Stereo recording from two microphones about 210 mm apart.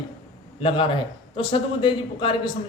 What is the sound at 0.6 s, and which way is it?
A man's voice, 25° left (ahead or behind).